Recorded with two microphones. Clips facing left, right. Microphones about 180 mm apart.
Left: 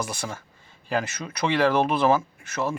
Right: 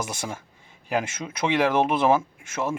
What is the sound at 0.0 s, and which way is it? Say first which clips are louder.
Speech: even; 20° right (ahead or behind).